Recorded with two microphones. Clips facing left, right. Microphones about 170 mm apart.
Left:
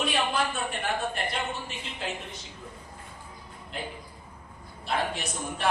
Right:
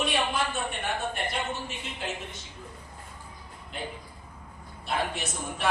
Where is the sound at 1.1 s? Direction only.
Centre (ahead or behind).